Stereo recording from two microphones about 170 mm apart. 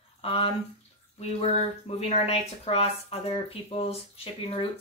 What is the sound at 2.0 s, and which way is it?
Speech, 40° left (ahead or behind).